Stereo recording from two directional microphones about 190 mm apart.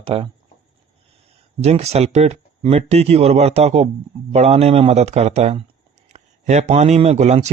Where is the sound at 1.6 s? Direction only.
35° right (ahead or behind).